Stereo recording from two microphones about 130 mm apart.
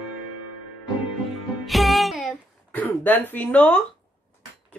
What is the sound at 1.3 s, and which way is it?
Music, centre (ahead or behind).